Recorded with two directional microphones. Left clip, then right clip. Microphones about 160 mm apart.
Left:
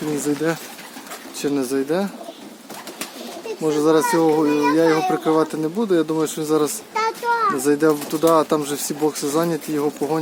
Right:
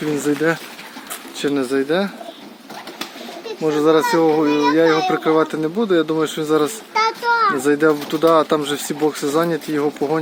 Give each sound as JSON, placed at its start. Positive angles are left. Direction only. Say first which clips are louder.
{"t": 0.2, "sound": "speech", "louder": "right 5 dB", "side_deg": -5}
{"t": 3.6, "sound": "speech", "louder": "right 2 dB", "side_deg": 0}
{"t": 6.9, "sound": "a sound", "louder": "right 4 dB", "side_deg": -55}
{"t": 7.6, "sound": "speech", "louder": "right 2 dB", "side_deg": -5}